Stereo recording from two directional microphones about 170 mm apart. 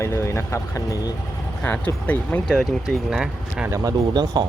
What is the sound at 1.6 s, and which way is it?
Speech, 10° left (ahead or behind).